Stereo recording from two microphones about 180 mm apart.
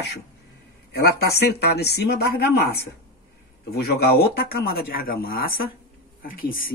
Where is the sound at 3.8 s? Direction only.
60° left (ahead or behind).